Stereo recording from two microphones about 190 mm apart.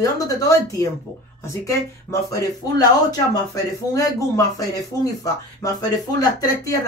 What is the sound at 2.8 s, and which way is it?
Speech, 20° left (ahead or behind).